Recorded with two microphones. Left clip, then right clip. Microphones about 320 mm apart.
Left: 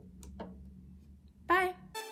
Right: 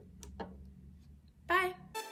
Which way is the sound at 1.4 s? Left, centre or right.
Centre.